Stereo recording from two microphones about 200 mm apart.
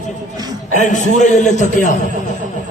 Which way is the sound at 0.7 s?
40° left (ahead or behind).